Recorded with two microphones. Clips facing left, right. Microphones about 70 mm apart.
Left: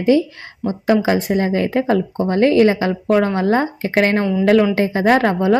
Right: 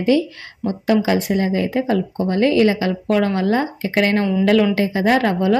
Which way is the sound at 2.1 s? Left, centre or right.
Left.